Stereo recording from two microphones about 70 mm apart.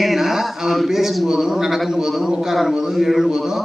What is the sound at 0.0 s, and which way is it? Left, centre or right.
Speech, centre.